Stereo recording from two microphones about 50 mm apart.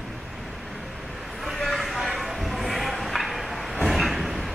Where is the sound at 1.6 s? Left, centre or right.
Centre.